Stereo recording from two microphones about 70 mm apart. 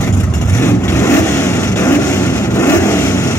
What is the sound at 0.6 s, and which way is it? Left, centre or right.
Vehicle, left.